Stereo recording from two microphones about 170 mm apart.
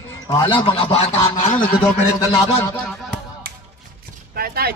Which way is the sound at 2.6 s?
15° left (ahead or behind).